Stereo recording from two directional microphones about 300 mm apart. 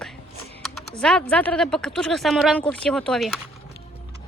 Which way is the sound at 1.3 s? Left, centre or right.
Centre.